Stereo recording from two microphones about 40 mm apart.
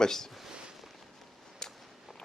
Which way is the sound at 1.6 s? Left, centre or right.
Centre.